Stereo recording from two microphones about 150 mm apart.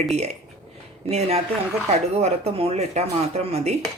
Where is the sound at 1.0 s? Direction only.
45° right (ahead or behind).